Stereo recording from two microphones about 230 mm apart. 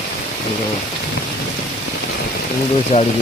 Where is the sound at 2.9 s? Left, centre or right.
Left.